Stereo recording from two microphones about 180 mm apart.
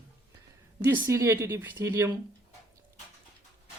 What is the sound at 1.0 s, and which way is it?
Speech, 15° right (ahead or behind).